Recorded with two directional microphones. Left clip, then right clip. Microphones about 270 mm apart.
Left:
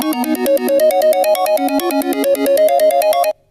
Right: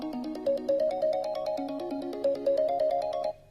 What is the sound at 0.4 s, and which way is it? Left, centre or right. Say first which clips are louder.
Music: left 14 dB; left.